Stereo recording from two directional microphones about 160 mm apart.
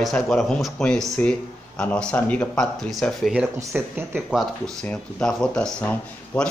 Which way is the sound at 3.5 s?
15° right (ahead or behind).